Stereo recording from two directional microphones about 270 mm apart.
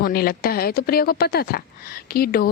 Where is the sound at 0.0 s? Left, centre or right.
Left.